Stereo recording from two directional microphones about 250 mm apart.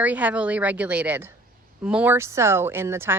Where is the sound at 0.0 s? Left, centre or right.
Centre.